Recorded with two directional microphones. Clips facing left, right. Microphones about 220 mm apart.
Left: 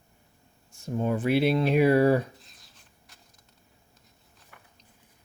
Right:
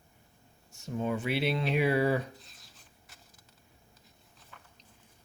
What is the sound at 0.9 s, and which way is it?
Speech, 50° left (ahead or behind).